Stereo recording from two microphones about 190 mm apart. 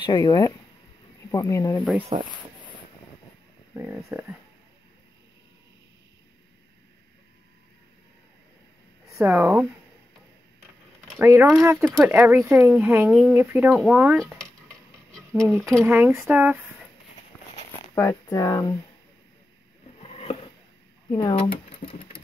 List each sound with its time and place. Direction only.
0.0 s speech: 20° left (ahead or behind)
2.0 s speech: 30° right (ahead or behind)
3.7 s speech: 10° right (ahead or behind)
9.1 s speech: 10° right (ahead or behind)
11.1 s speech: 10° right (ahead or behind)
15.1 s a sound: 5° left (ahead or behind)
15.5 s speech: 15° right (ahead or behind)
17.3 s a sound: 10° left (ahead or behind)
17.9 s speech: 15° left (ahead or behind)
20.0 s a sound: 30° left (ahead or behind)
21.1 s speech: 25° left (ahead or behind)